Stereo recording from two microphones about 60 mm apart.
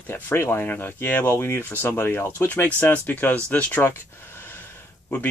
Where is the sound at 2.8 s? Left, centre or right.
Left.